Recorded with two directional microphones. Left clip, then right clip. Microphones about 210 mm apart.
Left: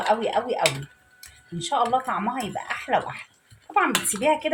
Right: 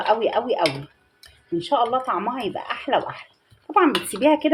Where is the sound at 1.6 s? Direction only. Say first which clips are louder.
Right 1 dB; 40° right (ahead or behind).